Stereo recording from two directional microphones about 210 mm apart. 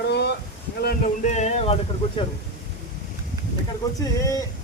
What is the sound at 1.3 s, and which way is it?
Speech, 30° left (ahead or behind).